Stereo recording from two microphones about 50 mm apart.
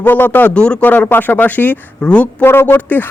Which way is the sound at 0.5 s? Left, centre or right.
Centre.